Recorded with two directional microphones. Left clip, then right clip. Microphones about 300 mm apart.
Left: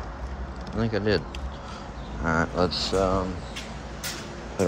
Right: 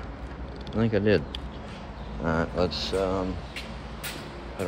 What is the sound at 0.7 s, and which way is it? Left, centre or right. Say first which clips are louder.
Speech: right 2 dB; centre.